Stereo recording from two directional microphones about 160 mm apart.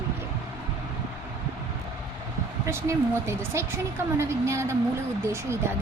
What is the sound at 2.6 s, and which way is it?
Speech, 15° right (ahead or behind).